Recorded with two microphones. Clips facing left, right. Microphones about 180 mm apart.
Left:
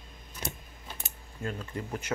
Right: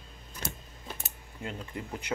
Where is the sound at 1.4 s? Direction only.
20° right (ahead or behind).